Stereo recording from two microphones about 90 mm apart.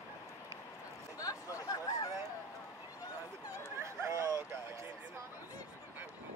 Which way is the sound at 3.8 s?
30° right (ahead or behind).